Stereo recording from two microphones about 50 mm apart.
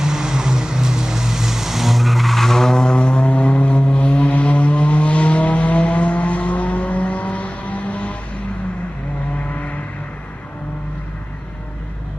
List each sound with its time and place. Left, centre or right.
0.0 s vehicle: centre; by 8.1 s left
9.5 s vehicle: left